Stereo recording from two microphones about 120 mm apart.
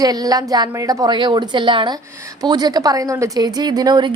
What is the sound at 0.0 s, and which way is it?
A woman's voice, 30° right (ahead or behind).